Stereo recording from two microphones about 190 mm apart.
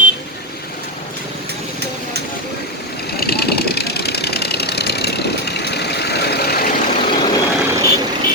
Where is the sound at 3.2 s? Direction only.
55° left (ahead or behind).